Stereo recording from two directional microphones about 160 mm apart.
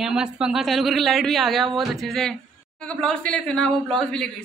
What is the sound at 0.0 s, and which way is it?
Speech, 5° right (ahead or behind).